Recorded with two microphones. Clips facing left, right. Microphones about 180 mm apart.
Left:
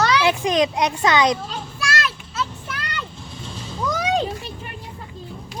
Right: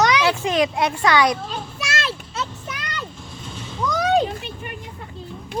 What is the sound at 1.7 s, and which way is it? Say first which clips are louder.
Children playing: left 3 dB; 25° right (ahead or behind).